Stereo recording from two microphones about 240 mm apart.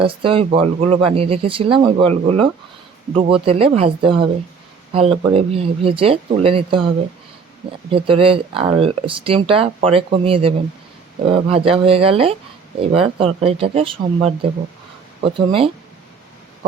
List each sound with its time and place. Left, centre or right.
0.0 s speech: right
5.3 s speech: right